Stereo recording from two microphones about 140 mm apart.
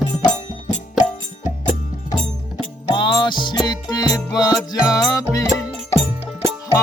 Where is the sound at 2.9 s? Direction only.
35° left (ahead or behind).